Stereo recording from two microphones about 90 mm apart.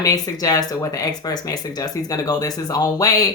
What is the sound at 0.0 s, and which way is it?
Speech, 45° left (ahead or behind).